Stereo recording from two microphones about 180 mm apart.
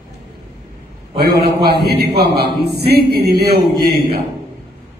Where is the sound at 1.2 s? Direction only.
60° right (ahead or behind).